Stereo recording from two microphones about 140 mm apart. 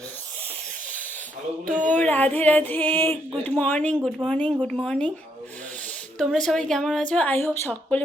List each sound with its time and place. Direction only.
1.6 s speech: 70° right (ahead or behind)
1.9 s a woman's voice: 10° left (ahead or behind)
6.1 s a woman's voice: 5° left (ahead or behind)